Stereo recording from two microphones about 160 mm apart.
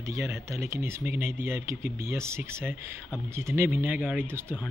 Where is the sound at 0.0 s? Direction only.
20° right (ahead or behind).